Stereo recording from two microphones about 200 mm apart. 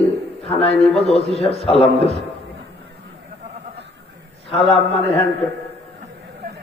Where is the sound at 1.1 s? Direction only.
30° left (ahead or behind).